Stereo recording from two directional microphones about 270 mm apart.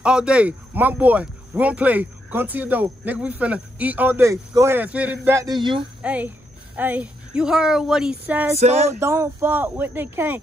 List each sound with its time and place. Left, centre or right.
0.0 s speech: centre
6.0 s speech: centre
8.5 s music: right
9.0 s speech: centre